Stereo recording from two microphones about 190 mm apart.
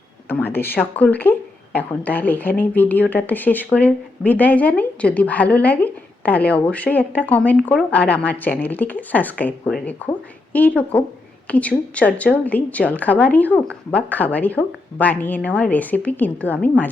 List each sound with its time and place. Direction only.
0.3 s speech: 10° left (ahead or behind)